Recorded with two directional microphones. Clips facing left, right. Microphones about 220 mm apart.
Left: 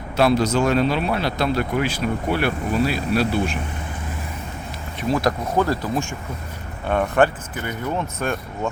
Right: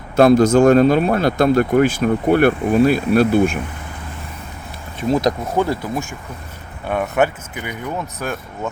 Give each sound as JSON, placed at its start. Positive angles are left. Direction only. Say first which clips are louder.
{"t": 0.2, "sound": "speech", "louder": "right 7 dB", "side_deg": -50}
{"t": 5.1, "sound": "speech", "louder": "right 3 dB", "side_deg": -20}